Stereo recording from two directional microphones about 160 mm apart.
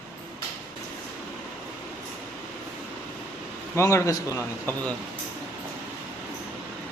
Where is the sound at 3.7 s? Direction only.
15° left (ahead or behind).